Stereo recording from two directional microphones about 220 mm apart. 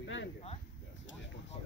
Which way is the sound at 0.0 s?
60° left (ahead or behind).